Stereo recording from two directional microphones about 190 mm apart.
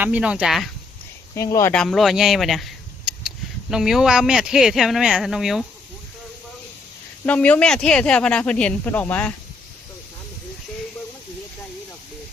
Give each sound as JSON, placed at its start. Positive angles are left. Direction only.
{"t": 0.0, "sound": "speech", "side_deg": -5}
{"t": 1.4, "sound": "speech", "side_deg": 15}
{"t": 1.7, "sound": "speech", "side_deg": 5}
{"t": 7.3, "sound": "speech", "side_deg": 5}